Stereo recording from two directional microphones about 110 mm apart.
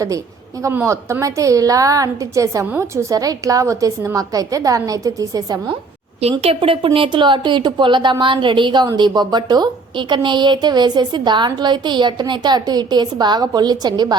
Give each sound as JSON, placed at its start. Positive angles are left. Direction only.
{"t": 0.7, "sound": "a woman's voice", "side_deg": -20}
{"t": 6.4, "sound": "a woman's voice", "side_deg": -55}